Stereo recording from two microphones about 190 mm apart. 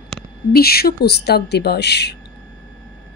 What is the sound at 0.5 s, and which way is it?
A woman's voice, 55° left (ahead or behind).